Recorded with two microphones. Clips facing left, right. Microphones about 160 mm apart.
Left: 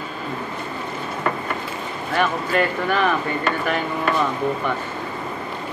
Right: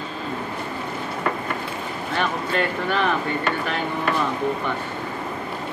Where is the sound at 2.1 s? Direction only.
5° left (ahead or behind).